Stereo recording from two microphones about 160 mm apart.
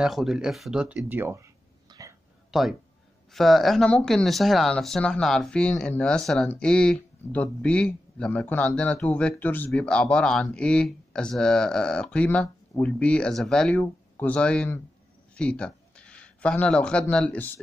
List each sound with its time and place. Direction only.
0.0 s speech: centre (ahead or behind)
1.9 s a sound: 20° right (ahead or behind)
2.5 s speech: centre (ahead or behind)